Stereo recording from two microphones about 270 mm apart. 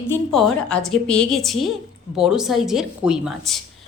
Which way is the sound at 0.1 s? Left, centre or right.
Centre.